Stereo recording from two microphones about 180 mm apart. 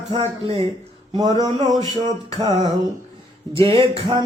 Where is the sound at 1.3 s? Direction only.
25° right (ahead or behind).